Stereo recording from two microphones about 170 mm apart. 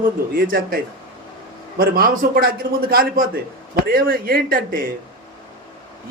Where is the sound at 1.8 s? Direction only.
60° right (ahead or behind).